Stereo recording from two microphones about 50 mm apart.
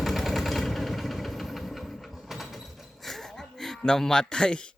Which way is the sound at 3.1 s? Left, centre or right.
Centre.